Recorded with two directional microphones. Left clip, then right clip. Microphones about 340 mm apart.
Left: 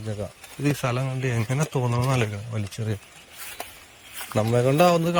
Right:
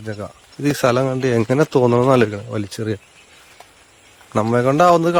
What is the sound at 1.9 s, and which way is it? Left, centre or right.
Speech, centre.